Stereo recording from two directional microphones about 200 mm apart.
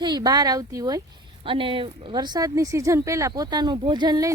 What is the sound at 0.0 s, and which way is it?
Speech, 20° right (ahead or behind).